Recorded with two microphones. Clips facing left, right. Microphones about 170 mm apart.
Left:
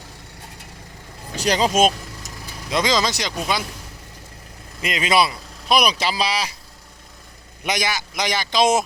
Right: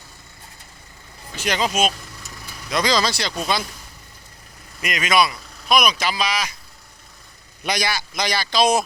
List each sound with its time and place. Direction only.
1.4 s speech: 35° left (ahead or behind)
2.6 s speech: 20° left (ahead or behind)
4.8 s speech: 25° left (ahead or behind)
7.6 s speech: 20° left (ahead or behind)